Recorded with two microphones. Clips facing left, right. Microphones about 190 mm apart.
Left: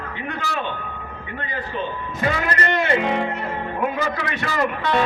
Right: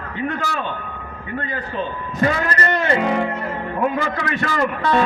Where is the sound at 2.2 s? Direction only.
40° right (ahead or behind).